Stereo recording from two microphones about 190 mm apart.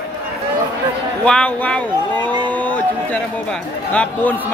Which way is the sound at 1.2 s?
5° left (ahead or behind).